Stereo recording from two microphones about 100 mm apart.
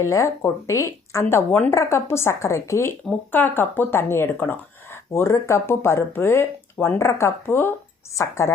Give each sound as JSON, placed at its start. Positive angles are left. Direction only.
{"t": 0.0, "sound": "speech", "side_deg": 30}
{"t": 1.5, "sound": "a woman's voice", "side_deg": 15}
{"t": 1.7, "sound": "speech", "side_deg": 30}
{"t": 3.1, "sound": "speech", "side_deg": 20}